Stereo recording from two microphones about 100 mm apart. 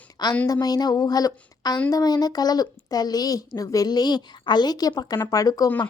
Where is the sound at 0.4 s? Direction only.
40° left (ahead or behind).